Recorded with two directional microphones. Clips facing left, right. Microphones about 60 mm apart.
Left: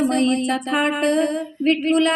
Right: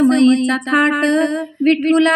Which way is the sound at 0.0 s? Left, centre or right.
Right.